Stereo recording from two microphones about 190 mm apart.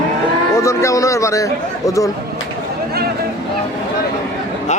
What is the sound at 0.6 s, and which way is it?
Speech, 15° left (ahead or behind).